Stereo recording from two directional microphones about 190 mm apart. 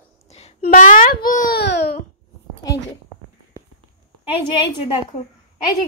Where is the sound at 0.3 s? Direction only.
35° left (ahead or behind).